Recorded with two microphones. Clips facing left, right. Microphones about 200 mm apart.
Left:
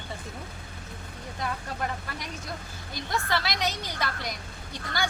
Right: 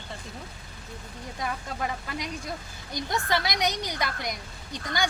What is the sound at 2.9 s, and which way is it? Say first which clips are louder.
A woman's voice: right 2 dB; 20° right (ahead or behind).